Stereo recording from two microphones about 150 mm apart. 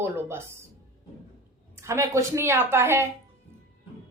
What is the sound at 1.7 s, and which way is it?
A woman's voice, 20° right (ahead or behind).